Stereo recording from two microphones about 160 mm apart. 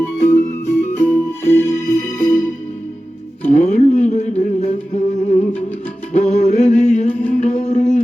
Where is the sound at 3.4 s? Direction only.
45° left (ahead or behind).